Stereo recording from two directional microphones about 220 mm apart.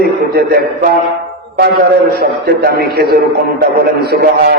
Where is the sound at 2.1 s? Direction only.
45° right (ahead or behind).